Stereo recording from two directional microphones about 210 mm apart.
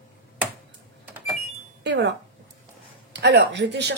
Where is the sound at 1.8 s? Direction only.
55° right (ahead or behind).